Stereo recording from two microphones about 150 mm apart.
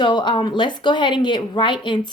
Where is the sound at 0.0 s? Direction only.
30° left (ahead or behind).